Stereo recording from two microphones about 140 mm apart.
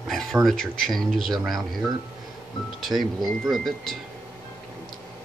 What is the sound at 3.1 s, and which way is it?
Speech, 30° right (ahead or behind).